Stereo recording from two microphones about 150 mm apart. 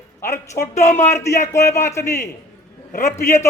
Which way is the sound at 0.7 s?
50° left (ahead or behind).